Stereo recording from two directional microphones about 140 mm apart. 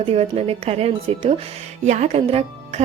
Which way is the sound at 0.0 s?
45° right (ahead or behind).